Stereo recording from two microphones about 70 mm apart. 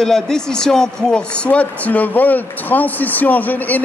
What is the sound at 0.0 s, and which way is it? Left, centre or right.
Speech, centre.